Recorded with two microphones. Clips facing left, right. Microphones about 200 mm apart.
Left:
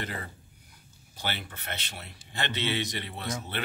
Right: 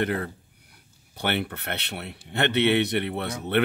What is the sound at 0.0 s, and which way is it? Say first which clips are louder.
Speech: right 11 dB; 60° right (ahead or behind).